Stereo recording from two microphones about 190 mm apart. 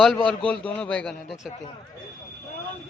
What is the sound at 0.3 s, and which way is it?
A man's voice, 5° left (ahead or behind).